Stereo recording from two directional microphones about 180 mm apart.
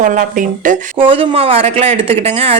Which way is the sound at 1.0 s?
30° right (ahead or behind).